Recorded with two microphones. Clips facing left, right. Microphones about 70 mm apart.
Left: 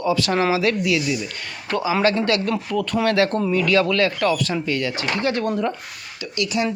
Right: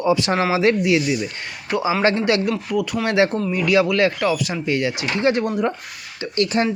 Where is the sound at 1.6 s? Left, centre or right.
Centre.